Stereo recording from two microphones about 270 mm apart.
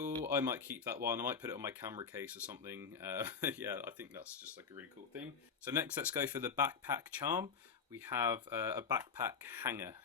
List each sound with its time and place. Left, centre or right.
0.3 s speech: centre